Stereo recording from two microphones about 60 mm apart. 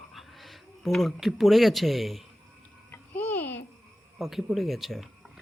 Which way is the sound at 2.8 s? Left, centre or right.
Left.